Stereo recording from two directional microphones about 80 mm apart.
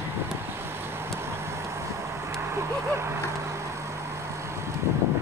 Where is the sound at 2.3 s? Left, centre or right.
Right.